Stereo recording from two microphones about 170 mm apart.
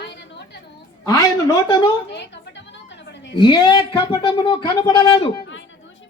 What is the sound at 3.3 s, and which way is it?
Speech, 25° left (ahead or behind).